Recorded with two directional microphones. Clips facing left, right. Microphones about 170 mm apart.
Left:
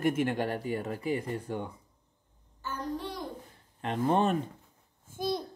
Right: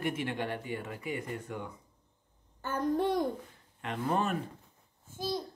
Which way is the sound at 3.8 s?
30° left (ahead or behind).